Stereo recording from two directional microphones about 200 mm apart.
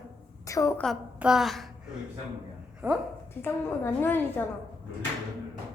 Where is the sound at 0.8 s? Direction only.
Centre (ahead or behind).